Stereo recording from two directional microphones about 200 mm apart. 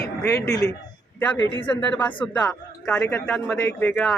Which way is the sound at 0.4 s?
15° left (ahead or behind).